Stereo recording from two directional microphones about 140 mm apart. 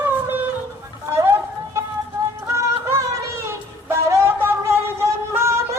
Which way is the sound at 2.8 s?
20° right (ahead or behind).